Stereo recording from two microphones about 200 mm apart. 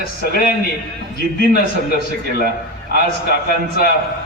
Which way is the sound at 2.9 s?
50° left (ahead or behind).